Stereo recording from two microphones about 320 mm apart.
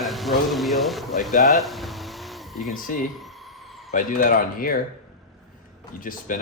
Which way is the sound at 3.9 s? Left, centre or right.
Left.